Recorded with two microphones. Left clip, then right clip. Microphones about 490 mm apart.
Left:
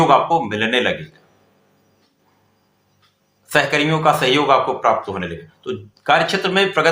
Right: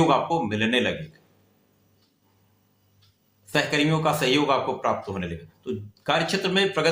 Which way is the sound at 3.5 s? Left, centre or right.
Right.